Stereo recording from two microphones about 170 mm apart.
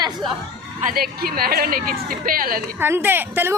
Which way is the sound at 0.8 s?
50° right (ahead or behind).